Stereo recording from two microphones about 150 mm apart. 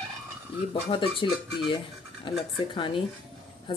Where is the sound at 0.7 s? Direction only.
35° left (ahead or behind).